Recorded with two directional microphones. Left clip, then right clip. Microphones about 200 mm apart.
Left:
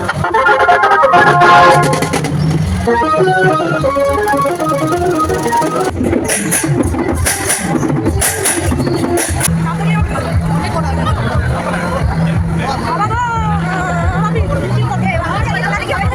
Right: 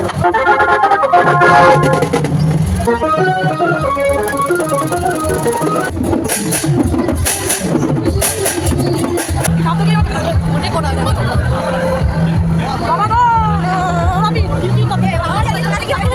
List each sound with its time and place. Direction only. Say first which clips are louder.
0.4 s music: left 3 dB; 5° right (ahead or behind)
13.0 s hubbub: right 7 dB; 40° right (ahead or behind)